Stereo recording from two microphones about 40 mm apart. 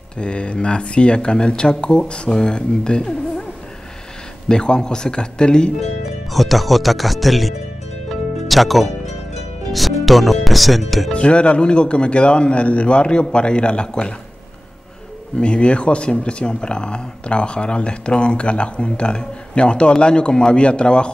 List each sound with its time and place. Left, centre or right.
0.2 s speech: left
4.5 s speech: left
6.3 s speech: centre
11.1 s speech: left
15.3 s speech: left